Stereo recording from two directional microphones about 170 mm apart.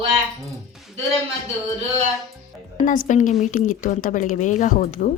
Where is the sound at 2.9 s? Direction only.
50° left (ahead or behind).